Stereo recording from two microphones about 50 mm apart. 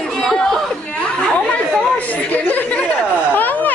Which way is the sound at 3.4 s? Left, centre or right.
Left.